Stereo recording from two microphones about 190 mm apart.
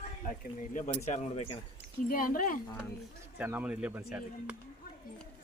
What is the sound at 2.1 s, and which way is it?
Speech, 45° left (ahead or behind).